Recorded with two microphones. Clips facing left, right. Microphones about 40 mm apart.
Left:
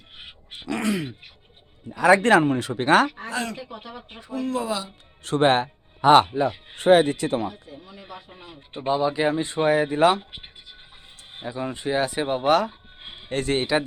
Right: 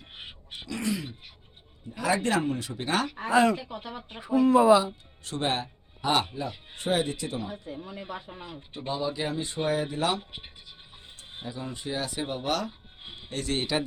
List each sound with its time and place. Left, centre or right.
0.7 s a sound: left
1.9 s speech: left
3.2 s speech: centre
3.6 s speech: centre
4.2 s speech: centre
5.2 s speech: left
7.8 s speech: right
8.0 s speech: centre
8.7 s speech: left
11.3 s speech: left